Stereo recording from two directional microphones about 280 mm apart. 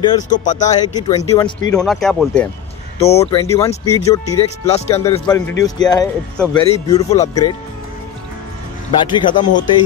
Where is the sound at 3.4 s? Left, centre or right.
Centre.